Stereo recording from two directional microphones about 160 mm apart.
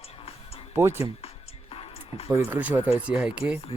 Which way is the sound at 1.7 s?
35° left (ahead or behind).